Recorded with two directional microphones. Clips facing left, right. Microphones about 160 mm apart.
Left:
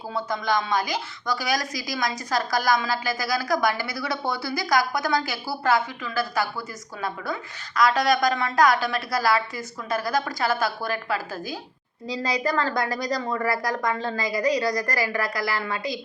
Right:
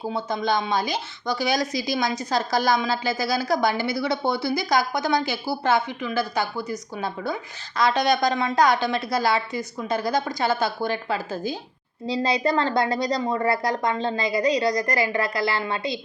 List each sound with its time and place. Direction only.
0.1 s speech: 25° right (ahead or behind)